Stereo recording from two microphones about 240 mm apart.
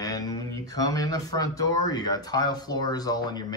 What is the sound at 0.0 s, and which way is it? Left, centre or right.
Speech, centre.